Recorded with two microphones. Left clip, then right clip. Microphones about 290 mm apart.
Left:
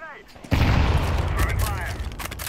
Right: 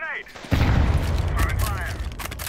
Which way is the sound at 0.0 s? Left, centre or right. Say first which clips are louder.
Right 9 dB; right.